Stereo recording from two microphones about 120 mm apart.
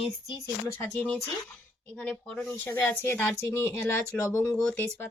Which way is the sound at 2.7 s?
20° left (ahead or behind).